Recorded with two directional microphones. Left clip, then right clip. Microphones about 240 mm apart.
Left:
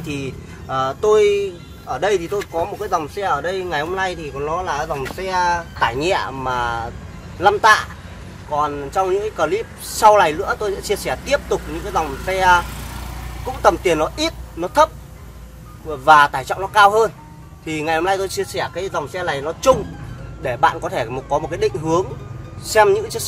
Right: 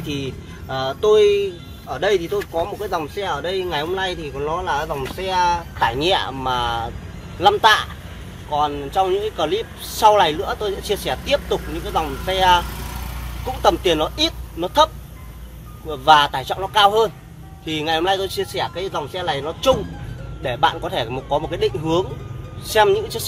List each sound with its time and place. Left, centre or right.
0.0 s speech: centre
15.9 s speech: centre